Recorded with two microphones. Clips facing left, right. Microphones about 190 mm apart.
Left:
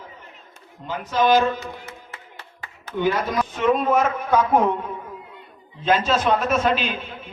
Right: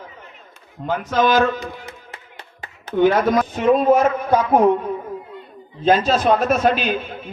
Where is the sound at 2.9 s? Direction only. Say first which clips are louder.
Right 7 dB; 55° right (ahead or behind); by 4.6 s 35° right (ahead or behind).